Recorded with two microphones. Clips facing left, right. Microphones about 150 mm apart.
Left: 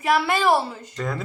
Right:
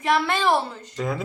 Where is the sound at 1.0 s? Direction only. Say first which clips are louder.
Right 2 dB; 5° right (ahead or behind).